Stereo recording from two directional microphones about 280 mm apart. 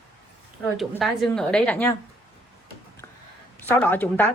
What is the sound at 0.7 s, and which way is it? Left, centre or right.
A woman's voice, centre.